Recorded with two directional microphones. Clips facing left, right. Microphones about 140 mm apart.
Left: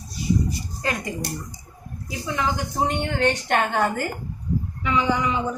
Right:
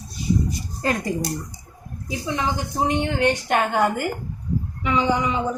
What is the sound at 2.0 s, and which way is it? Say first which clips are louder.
A woman's voice: right 1 dB; 20° right (ahead or behind).